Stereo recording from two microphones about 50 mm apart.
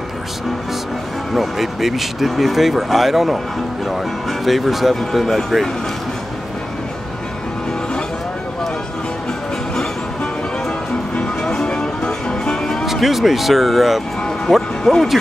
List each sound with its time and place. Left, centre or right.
1.3 s speech: centre
11.1 s music: centre
12.8 s speech: centre
14.8 s speech: centre